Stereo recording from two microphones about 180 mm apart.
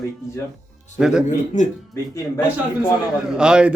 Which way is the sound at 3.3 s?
5° right (ahead or behind).